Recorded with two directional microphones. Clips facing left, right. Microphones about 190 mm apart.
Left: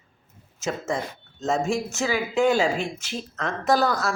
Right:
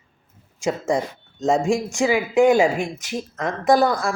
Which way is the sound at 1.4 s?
15° right (ahead or behind).